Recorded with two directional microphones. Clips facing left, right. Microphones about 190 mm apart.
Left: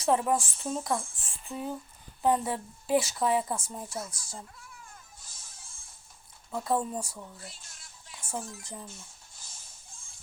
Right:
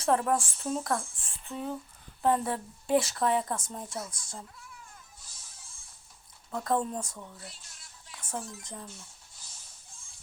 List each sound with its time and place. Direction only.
0.0 s a woman's voice: 5° left (ahead or behind)
5.2 s music: 50° left (ahead or behind)
6.5 s speech: 5° left (ahead or behind)
7.4 s music: 50° left (ahead or behind)
8.1 s music: 10° left (ahead or behind)
8.6 s speech: 10° left (ahead or behind)
8.9 s rodents: 45° left (ahead or behind)